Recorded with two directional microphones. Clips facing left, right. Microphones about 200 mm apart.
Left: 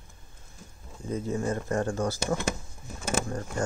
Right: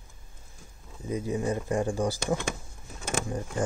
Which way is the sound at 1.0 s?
15° right (ahead or behind).